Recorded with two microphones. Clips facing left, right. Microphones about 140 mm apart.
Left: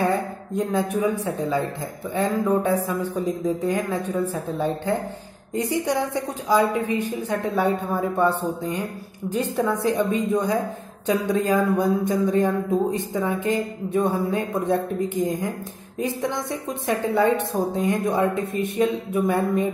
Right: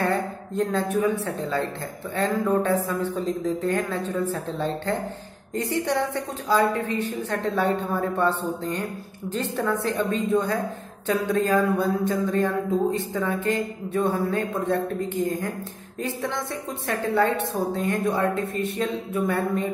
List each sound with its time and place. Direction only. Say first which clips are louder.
0.0 s a man's voice: left 2 dB; 15° left (ahead or behind)
16.8 s speech: left 2 dB; 15° left (ahead or behind)